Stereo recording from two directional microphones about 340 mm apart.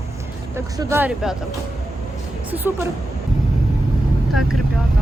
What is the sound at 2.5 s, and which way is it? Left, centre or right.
Speech, centre.